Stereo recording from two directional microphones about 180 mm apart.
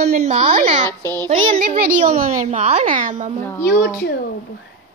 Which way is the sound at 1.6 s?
50° right (ahead or behind).